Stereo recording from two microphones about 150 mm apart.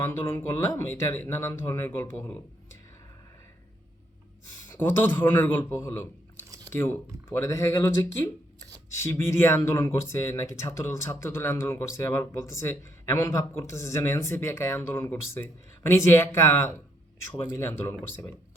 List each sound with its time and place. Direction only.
0.0 s speech: 20° left (ahead or behind)
4.7 s speech: 15° left (ahead or behind)